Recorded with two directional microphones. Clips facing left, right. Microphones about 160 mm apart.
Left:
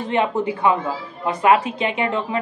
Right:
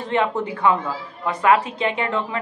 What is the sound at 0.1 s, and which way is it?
A woman's voice, 15° left (ahead or behind).